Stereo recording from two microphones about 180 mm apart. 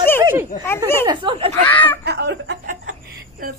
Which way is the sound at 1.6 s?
10° left (ahead or behind).